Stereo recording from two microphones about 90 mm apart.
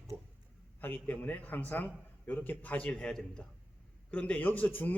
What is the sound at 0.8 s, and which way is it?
A man's voice, 20° left (ahead or behind).